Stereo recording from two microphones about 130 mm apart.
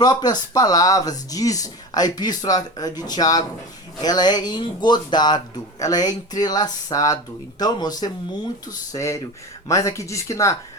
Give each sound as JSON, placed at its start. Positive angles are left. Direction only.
{"t": 0.0, "sound": "speech", "side_deg": 30}